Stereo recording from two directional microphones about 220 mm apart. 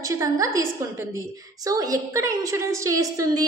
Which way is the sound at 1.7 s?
15° right (ahead or behind).